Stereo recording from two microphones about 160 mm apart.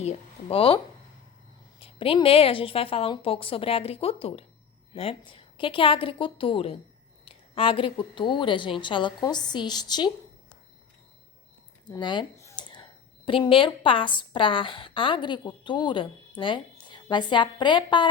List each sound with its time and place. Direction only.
0.0 s speech: 40° left (ahead or behind)
1.8 s a woman's voice: 35° left (ahead or behind)
11.9 s speech: 30° left (ahead or behind)
12.4 s a sound: 20° left (ahead or behind)
13.2 s a woman's voice: 35° left (ahead or behind)